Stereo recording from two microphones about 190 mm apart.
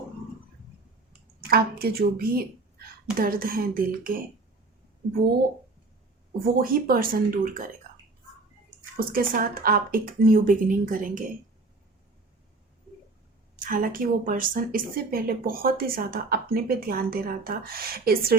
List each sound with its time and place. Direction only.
1.5 s speech: 55° right (ahead or behind)
6.4 s speech: 50° right (ahead or behind)
9.0 s speech: 50° right (ahead or behind)
13.6 s speech: 45° right (ahead or behind)